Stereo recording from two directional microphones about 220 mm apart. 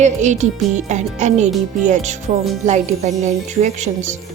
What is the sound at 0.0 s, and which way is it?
Speech, 30° right (ahead or behind).